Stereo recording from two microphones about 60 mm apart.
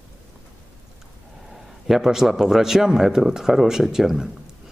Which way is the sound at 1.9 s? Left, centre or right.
Centre.